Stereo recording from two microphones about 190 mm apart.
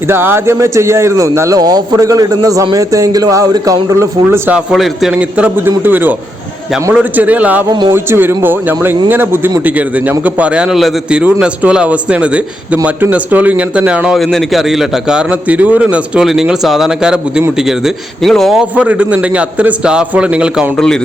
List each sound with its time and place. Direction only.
0.1 s a man's voice: 10° right (ahead or behind)
7.7 s a man's voice: 25° right (ahead or behind)
7.9 s a man's voice: 10° right (ahead or behind); by 21.0 s 5° left (ahead or behind)